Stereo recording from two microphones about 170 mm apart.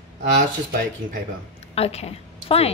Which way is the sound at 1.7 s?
35° left (ahead or behind).